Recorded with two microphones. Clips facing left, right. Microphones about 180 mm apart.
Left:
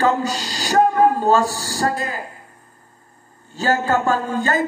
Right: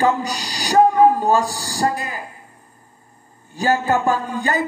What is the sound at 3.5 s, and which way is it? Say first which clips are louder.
Speech: right 1 dB; 15° right (ahead or behind).